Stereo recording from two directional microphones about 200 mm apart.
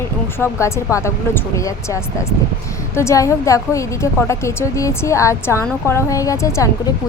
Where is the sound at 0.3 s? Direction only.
15° left (ahead or behind).